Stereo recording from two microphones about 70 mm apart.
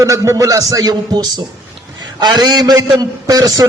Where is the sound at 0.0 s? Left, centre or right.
Right.